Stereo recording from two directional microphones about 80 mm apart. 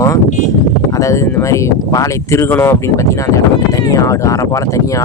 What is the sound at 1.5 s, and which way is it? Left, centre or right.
Speech, left.